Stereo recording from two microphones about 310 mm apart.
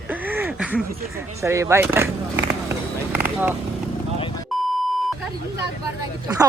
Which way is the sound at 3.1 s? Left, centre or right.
Centre.